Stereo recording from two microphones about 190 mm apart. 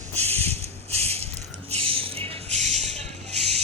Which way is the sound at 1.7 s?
30° right (ahead or behind).